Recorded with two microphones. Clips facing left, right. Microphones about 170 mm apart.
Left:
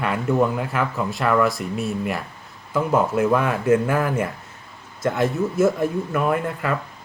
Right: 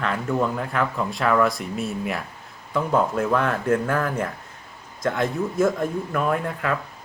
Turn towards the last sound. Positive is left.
turn(degrees=0)  # may be behind; listen again after turning